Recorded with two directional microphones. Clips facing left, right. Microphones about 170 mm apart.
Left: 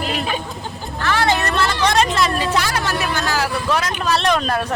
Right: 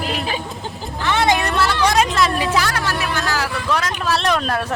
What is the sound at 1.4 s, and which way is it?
Speech, centre (ahead or behind).